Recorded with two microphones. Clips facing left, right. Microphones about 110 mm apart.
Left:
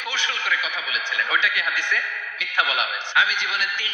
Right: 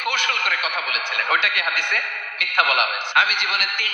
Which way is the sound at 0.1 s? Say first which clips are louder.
Even; 60° right (ahead or behind).